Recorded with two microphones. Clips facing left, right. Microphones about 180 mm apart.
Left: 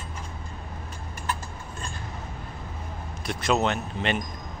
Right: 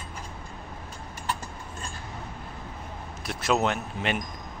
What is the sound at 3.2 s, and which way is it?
Speech, 5° right (ahead or behind).